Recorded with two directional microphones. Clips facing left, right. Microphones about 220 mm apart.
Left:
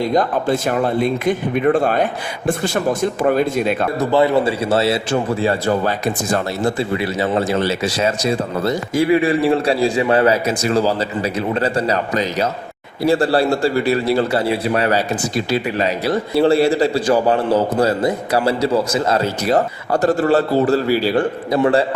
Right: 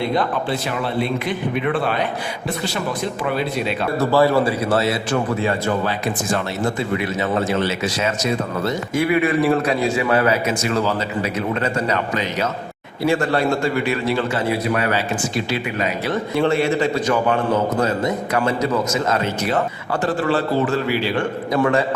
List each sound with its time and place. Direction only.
0.0 s a man's voice: 45° left (ahead or behind)
4.0 s a man's voice: 20° left (ahead or behind)